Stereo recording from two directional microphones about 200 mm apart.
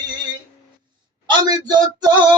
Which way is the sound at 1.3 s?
20° right (ahead or behind).